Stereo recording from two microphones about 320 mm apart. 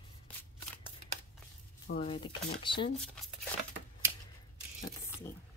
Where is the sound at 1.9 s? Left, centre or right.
Centre.